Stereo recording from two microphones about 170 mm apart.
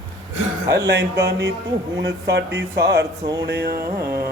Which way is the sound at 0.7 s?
70° right (ahead or behind).